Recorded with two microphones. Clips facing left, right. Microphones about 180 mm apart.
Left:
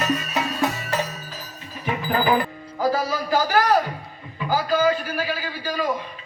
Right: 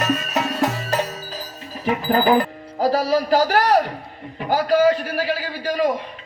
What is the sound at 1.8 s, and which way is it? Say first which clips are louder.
Music: right 4 dB; 35° right (ahead or behind).